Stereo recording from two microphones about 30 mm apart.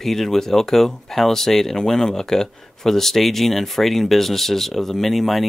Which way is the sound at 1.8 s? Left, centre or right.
Left.